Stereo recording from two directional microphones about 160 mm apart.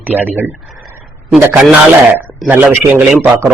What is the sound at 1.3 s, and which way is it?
A man's voice, 5° right (ahead or behind).